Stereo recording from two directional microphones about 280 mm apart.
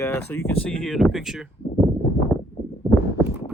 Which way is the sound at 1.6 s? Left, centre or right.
Centre.